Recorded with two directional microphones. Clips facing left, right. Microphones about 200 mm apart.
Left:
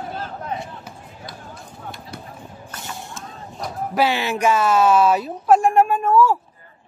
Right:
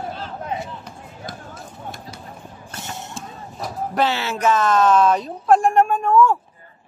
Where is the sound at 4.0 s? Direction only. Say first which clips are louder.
Left 1 dB; 15° left (ahead or behind).